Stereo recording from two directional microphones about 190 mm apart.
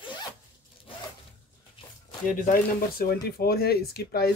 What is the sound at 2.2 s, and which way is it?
Speech, 45° left (ahead or behind).